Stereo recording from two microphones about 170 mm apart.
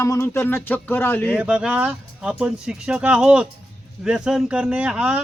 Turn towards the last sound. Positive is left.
turn(degrees=-5)  # may be behind; listen again after turning